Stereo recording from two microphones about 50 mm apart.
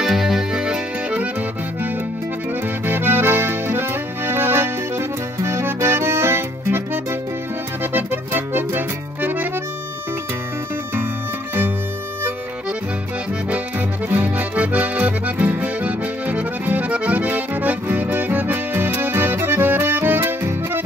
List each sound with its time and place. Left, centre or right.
0.0 s music: centre
2.9 s accordion: right
13.5 s accordion: right